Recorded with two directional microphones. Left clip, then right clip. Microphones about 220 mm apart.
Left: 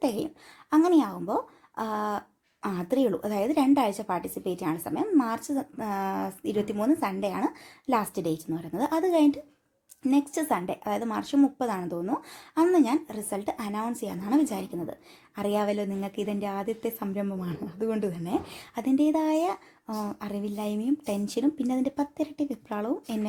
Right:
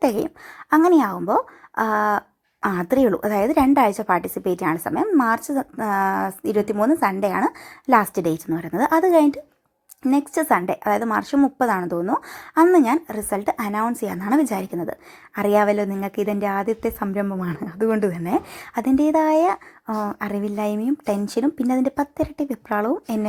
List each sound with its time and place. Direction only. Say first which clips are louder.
0.0 s a woman's voice: right 8 dB; 30° right (ahead or behind)